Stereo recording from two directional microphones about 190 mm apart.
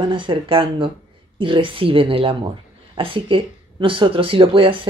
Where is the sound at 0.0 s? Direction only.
25° right (ahead or behind).